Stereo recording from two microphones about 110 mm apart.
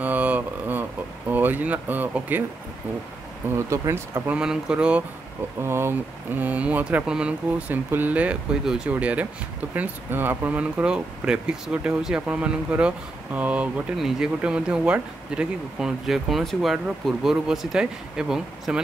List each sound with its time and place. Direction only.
0.0 s a sound: 15° right (ahead or behind)
1.3 s speech: 15° right (ahead or behind)
3.5 s speech: 25° right (ahead or behind)
4.3 s speech: 5° right (ahead or behind)
5.6 s speech: 20° right (ahead or behind); by 18.8 s 5° right (ahead or behind)